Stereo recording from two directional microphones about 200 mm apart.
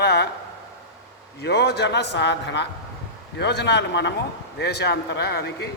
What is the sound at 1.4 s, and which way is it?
A man's voice, 55° left (ahead or behind).